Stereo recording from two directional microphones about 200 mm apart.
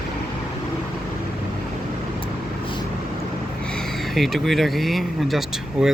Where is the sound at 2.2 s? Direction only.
25° left (ahead or behind).